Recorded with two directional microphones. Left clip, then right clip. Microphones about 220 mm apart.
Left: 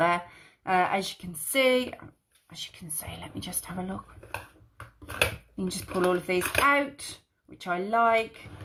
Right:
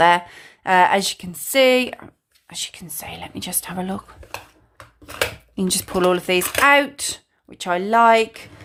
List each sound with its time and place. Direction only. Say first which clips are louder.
0.0 s speech: right 10 dB; 30° right (ahead or behind)
5.5 s speech: right 10 dB; 30° right (ahead or behind)